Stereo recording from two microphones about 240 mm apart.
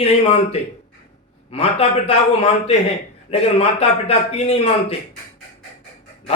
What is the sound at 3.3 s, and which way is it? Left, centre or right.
A man's voice, left.